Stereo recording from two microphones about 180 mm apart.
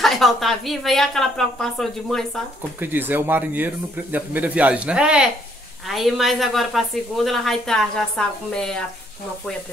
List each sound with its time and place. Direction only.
0.0 s a woman's voice: centre (ahead or behind)
2.8 s a woman's voice: 10° right (ahead or behind)